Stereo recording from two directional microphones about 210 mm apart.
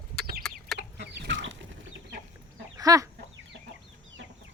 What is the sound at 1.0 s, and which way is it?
Chicken, 60° right (ahead or behind).